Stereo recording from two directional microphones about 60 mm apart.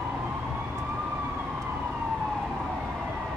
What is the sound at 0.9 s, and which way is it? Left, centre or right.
Emergency vehicle, right.